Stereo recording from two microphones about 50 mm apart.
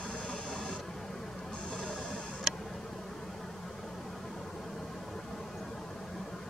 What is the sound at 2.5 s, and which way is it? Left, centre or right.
Tick, centre.